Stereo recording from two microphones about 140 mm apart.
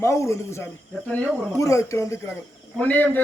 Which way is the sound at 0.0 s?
20° left (ahead or behind).